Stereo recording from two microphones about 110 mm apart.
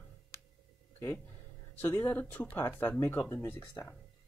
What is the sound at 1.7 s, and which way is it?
Speech, 15° left (ahead or behind).